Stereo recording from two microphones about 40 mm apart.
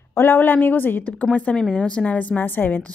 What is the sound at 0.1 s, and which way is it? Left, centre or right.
Speech, left.